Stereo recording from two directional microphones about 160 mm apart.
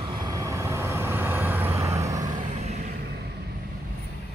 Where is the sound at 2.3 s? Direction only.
45° right (ahead or behind).